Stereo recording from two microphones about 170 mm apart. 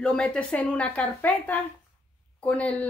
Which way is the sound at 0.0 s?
5° left (ahead or behind).